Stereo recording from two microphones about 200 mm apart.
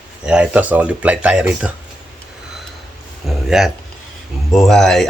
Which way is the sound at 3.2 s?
Centre (ahead or behind).